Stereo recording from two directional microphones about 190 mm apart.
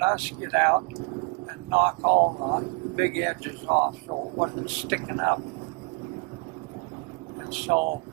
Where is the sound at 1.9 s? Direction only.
30° right (ahead or behind).